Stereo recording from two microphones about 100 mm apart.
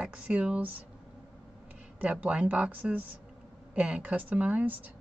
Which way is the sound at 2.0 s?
10° right (ahead or behind).